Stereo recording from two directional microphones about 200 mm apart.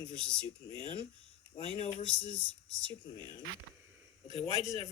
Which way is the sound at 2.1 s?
70° left (ahead or behind).